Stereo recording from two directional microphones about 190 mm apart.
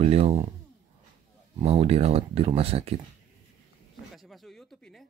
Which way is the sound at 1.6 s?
30° right (ahead or behind).